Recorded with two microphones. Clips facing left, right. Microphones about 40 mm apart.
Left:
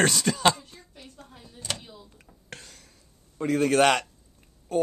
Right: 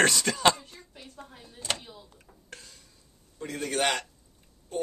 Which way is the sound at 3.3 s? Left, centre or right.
Left.